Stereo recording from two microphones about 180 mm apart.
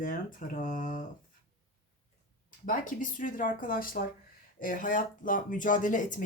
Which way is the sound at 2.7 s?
45° left (ahead or behind).